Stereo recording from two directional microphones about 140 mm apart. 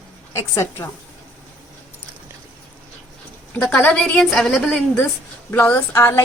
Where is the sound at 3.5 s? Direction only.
10° left (ahead or behind).